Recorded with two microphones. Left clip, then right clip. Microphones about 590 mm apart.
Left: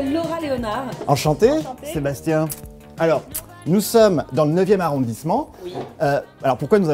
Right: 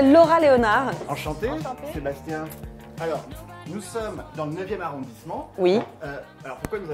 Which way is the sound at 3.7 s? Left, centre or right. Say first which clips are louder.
Left 17 dB; centre.